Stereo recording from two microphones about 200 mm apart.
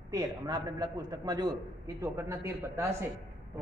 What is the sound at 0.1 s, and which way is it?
A man's voice, 20° right (ahead or behind).